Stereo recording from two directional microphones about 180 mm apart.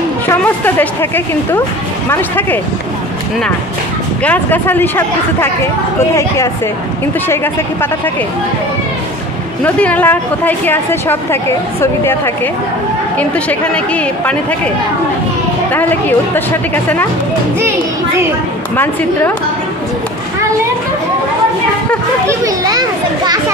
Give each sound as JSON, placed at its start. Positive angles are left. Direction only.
{"t": 0.7, "sound": "a woman's voice", "side_deg": 10}
{"t": 4.2, "sound": "a woman's voice", "side_deg": 10}
{"t": 9.8, "sound": "a woman's voice", "side_deg": 10}
{"t": 13.2, "sound": "a woman's voice", "side_deg": 10}
{"t": 15.7, "sound": "a woman's voice", "side_deg": 10}
{"t": 22.2, "sound": "a child's voice", "side_deg": -15}